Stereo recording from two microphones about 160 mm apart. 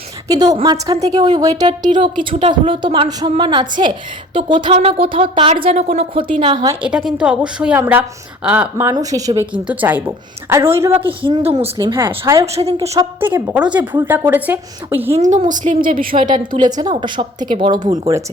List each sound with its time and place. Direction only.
0.3 s a woman's voice: 25° right (ahead or behind)
6.8 s a woman's voice: 5° right (ahead or behind)
9.5 s a woman's voice: 10° right (ahead or behind)
11.2 s a woman's voice: 30° right (ahead or behind)
12.2 s a woman's voice: 15° right (ahead or behind)
12.5 s a woman's voice: 40° right (ahead or behind)
13.1 s a woman's voice: 15° right (ahead or behind)
15.1 s a woman's voice: 50° right (ahead or behind)
16.6 s a woman's voice: 25° right (ahead or behind)